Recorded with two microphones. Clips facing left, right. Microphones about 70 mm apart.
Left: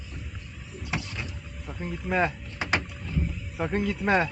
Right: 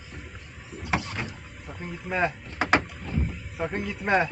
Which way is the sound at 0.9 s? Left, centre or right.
Right.